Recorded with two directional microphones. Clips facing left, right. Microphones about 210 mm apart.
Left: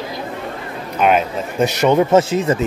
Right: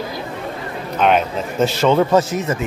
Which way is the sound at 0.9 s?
5° left (ahead or behind).